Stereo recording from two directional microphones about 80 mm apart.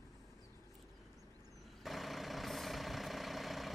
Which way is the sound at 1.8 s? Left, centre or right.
Centre.